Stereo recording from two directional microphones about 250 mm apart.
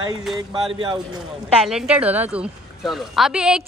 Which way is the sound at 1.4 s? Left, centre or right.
Centre.